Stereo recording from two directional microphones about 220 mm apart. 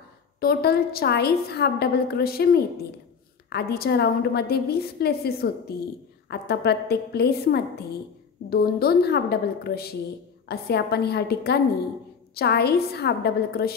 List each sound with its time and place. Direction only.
0.4 s a woman's voice: 45° left (ahead or behind)